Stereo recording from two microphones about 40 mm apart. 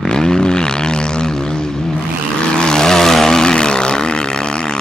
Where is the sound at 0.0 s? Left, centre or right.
Centre.